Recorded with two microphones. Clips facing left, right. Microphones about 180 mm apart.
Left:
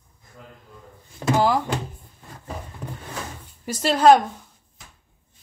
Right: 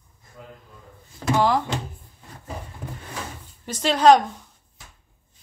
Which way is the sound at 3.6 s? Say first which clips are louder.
Left 1 dB; 10° left (ahead or behind).